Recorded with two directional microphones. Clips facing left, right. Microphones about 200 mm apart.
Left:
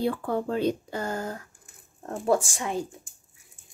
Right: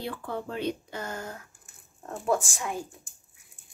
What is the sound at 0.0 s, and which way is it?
Speech, 45° left (ahead or behind).